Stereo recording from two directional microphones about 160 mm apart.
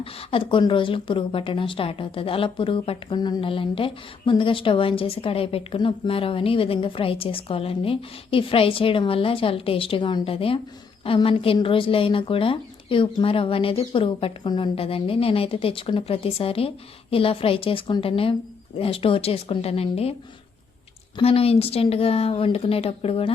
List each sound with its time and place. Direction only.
0.0 s a woman's voice: 35° left (ahead or behind)
21.2 s a woman's voice: 35° left (ahead or behind)